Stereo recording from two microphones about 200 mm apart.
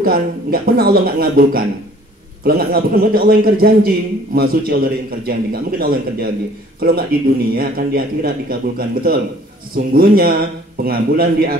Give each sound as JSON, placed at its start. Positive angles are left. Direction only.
{"t": 0.0, "sound": "speech", "side_deg": -50}